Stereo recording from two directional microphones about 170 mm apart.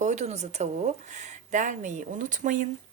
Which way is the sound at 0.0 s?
45° right (ahead or behind).